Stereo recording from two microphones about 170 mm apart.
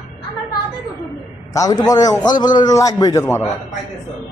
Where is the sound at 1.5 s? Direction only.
20° left (ahead or behind).